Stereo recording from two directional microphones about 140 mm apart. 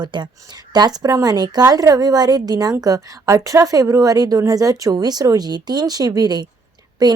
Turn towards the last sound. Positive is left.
turn(degrees=-30)  # may be behind; listen again after turning